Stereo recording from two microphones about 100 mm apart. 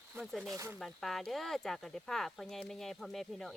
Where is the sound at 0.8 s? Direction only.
Centre (ahead or behind).